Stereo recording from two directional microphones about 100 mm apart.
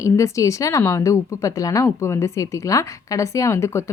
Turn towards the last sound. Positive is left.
turn(degrees=30)  # may be behind; listen again after turning